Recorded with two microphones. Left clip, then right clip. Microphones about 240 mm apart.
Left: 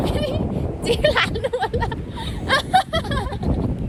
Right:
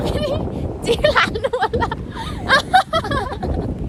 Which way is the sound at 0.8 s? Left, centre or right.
Centre.